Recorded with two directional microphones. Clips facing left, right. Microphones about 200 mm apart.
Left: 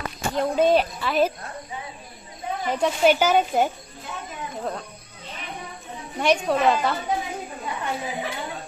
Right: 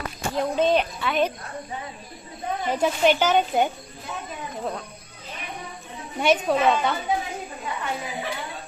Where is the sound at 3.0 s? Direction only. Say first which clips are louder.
Left 2 dB; 10° left (ahead or behind).